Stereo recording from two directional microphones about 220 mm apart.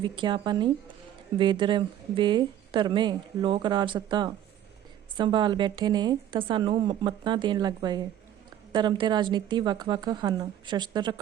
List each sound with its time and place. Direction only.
0.0 s speech: 20° right (ahead or behind)